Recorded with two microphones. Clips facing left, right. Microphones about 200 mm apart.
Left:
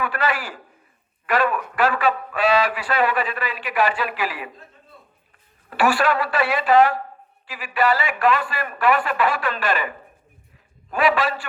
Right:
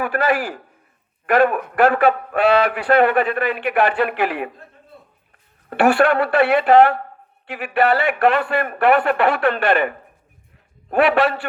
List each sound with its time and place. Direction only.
0.0 s a man's voice: 50° right (ahead or behind)
5.6 s a man's voice: 60° right (ahead or behind)